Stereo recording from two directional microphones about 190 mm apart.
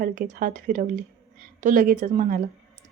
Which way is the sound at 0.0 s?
45° right (ahead or behind).